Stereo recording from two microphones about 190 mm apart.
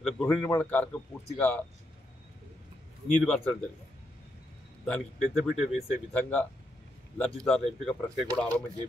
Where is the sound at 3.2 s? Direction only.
5° left (ahead or behind).